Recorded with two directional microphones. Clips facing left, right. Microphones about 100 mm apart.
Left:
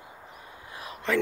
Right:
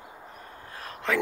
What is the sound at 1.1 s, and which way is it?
Speech, centre (ahead or behind).